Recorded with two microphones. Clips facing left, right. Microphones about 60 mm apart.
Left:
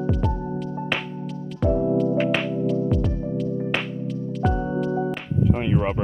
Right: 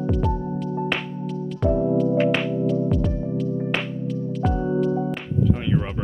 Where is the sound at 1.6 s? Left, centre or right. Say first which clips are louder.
Even; centre.